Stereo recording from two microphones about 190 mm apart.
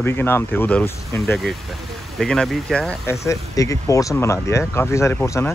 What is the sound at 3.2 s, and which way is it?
Speech, 15° left (ahead or behind).